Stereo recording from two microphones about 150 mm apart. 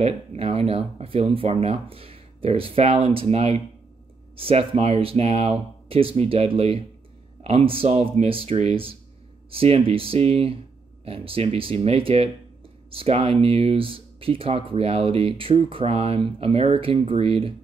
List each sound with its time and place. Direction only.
0.0 s speech: 40° right (ahead or behind)